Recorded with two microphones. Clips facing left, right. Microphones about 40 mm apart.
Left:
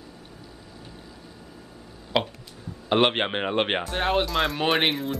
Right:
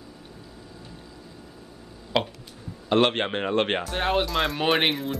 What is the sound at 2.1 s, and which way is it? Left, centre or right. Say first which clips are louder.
Speech: even; centre.